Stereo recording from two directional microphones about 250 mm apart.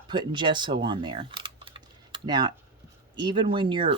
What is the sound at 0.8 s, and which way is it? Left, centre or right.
Computer keyboard, centre.